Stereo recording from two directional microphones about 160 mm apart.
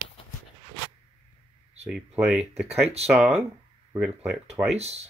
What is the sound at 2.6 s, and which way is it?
Speech, 40° right (ahead or behind).